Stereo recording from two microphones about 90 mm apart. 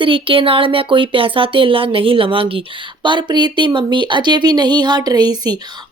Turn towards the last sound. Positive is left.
turn(degrees=-50)  # may be behind; listen again after turning